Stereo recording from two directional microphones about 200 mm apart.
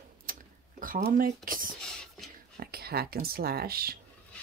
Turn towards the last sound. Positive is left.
turn(degrees=-50)  # may be behind; listen again after turning